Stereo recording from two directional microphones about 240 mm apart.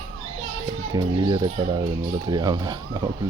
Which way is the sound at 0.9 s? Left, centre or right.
Centre.